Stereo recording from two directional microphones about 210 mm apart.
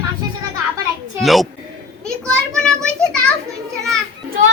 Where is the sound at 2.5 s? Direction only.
5° left (ahead or behind).